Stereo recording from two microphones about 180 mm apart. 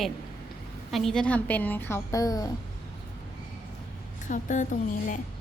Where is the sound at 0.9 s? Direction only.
Centre (ahead or behind); by 2.5 s 20° left (ahead or behind).